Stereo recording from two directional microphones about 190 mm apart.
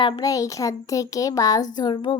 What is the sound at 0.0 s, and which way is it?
A child's voice, 20° left (ahead or behind).